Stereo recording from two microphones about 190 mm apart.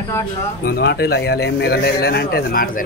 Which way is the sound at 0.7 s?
55° left (ahead or behind).